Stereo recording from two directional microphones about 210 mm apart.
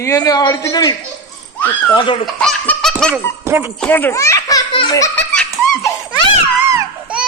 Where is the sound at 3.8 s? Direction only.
10° left (ahead or behind).